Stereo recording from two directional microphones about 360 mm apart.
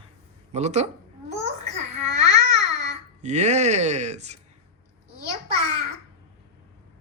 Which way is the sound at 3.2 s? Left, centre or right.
Centre.